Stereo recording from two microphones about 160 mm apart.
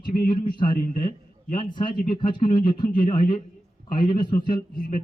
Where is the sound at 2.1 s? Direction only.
30° left (ahead or behind).